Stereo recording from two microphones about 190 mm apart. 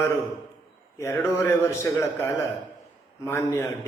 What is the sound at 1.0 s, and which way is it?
A man's voice, 15° left (ahead or behind).